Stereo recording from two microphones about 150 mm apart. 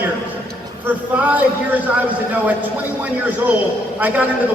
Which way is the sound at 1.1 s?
10° right (ahead or behind).